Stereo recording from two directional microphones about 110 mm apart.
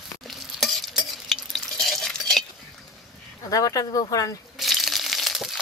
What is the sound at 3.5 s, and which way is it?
Speech, 30° left (ahead or behind).